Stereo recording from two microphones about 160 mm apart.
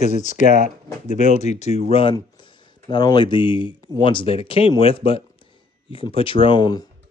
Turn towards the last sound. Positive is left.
turn(degrees=25)  # may be behind; listen again after turning